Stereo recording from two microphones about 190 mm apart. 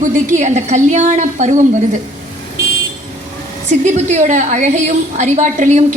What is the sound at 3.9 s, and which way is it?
Music, 40° right (ahead or behind).